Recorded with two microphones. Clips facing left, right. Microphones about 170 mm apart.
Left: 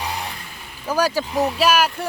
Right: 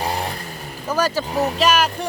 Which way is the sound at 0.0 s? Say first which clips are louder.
Right 4 dB; 40° right (ahead or behind).